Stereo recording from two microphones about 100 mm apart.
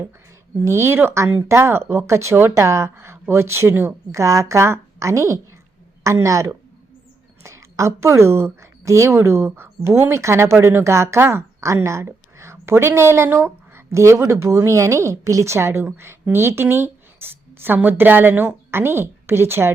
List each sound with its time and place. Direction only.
0.6 s a woman's voice: 25° right (ahead or behind)